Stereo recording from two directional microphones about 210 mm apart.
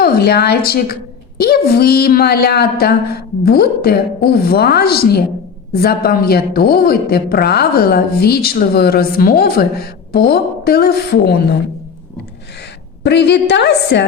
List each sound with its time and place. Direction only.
0.0 s a woman's voice: 50° left (ahead or behind)
13.0 s a woman's voice: 55° left (ahead or behind)